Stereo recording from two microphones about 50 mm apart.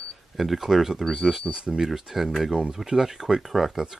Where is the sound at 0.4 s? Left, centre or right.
Centre.